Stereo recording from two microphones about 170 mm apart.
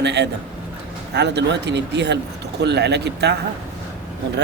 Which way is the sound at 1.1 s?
90° right.